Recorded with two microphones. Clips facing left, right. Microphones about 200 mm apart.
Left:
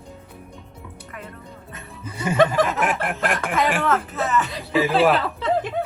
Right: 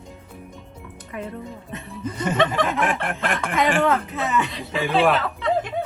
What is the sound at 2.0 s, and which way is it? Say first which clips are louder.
Speech: left 3 dB; 10° left (ahead or behind).